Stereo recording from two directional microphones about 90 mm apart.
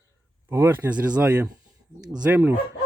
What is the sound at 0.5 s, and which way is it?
Speech, 25° right (ahead or behind).